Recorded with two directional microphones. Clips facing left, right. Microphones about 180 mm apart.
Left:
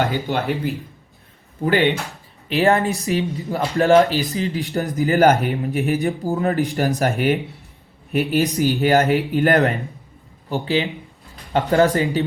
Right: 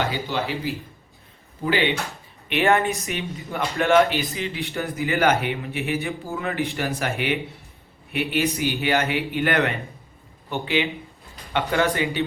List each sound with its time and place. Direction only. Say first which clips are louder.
0.0 s speech: left 4 dB; 55° left (ahead or behind)
2.5 s speech: left 3 dB; 35° left (ahead or behind)